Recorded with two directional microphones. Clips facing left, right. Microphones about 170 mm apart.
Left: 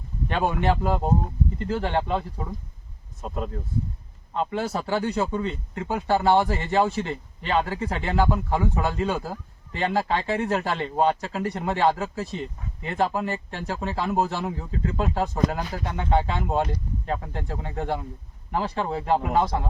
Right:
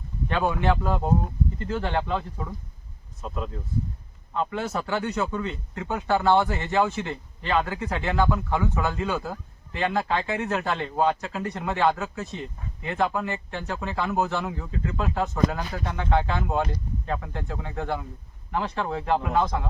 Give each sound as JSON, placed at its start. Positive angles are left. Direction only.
{"t": 0.3, "sound": "speech", "side_deg": 30}
{"t": 3.2, "sound": "speech", "side_deg": 45}
{"t": 4.5, "sound": "speech", "side_deg": 35}